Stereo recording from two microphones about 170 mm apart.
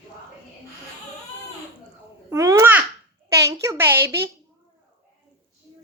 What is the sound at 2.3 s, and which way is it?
Babbling, 20° right (ahead or behind).